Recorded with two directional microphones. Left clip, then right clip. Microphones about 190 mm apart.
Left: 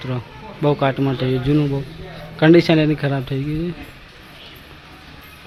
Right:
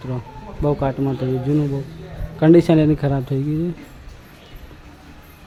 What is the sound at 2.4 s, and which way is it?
Speech, 15° right (ahead or behind).